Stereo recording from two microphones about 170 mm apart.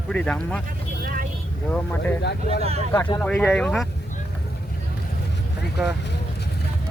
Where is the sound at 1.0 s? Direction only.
55° right (ahead or behind).